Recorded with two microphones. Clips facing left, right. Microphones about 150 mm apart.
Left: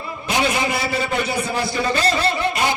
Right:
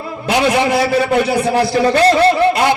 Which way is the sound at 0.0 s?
70° right (ahead or behind).